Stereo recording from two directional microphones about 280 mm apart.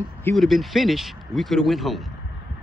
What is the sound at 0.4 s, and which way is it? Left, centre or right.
Speech, centre.